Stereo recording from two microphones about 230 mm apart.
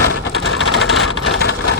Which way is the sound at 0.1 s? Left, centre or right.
Left.